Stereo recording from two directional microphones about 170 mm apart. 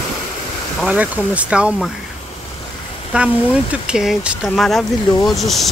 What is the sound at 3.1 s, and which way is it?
Speech, 5° right (ahead or behind).